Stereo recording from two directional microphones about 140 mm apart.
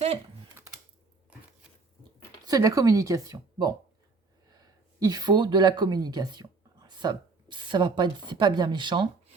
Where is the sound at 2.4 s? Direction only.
25° right (ahead or behind).